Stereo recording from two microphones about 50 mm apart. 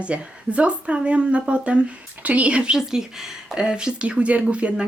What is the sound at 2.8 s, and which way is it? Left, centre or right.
A woman's voice, centre.